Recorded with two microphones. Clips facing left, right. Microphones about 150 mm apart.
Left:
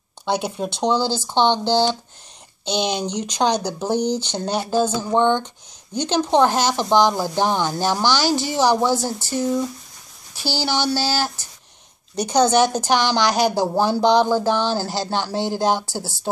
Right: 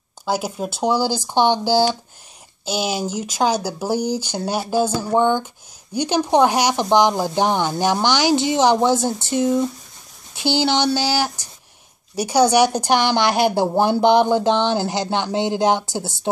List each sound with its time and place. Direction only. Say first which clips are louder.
0.2 s speech: even; 5° right (ahead or behind)
12.9 s a woman's voice: even; 55° right (ahead or behind)
14.2 s speech: right 2 dB; 20° right (ahead or behind)